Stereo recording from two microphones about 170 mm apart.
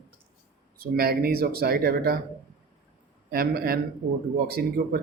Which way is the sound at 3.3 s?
60° right (ahead or behind).